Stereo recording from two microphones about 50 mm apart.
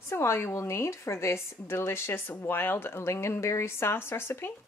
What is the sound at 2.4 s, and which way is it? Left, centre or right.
Speech, left.